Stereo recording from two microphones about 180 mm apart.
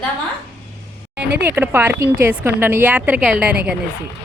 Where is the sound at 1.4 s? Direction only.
10° right (ahead or behind).